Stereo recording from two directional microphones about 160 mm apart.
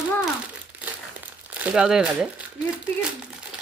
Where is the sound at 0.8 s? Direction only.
10° right (ahead or behind).